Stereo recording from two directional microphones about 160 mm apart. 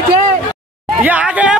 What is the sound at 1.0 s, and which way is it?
Speech, 10° right (ahead or behind).